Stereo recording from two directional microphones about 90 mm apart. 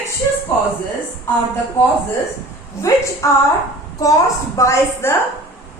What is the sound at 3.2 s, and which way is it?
Speech, 35° left (ahead or behind).